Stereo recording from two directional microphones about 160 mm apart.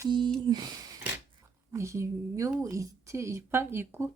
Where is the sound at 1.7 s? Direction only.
20° right (ahead or behind).